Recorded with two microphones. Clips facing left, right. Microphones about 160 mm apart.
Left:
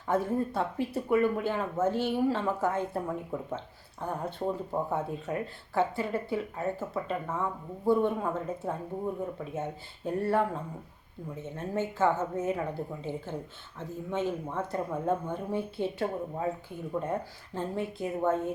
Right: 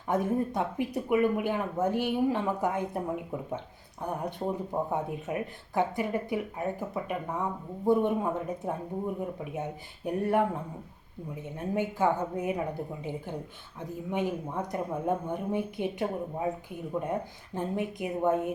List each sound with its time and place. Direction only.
0.1 s speech: 15° right (ahead or behind)